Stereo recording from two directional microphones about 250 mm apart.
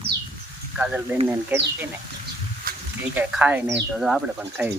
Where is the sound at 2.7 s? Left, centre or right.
Right.